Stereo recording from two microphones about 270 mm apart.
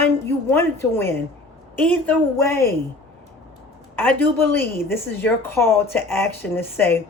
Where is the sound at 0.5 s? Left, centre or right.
Centre.